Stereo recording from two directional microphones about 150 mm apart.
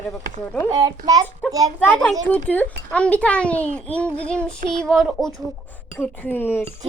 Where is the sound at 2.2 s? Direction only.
10° left (ahead or behind).